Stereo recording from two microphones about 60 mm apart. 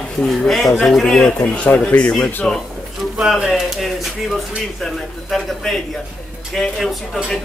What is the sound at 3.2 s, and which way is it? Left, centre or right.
Speech, centre.